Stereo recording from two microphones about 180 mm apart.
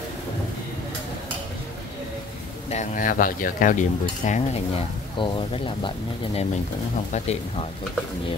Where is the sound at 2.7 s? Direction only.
45° left (ahead or behind).